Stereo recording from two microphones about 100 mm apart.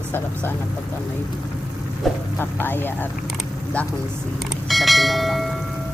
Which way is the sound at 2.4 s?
20° left (ahead or behind).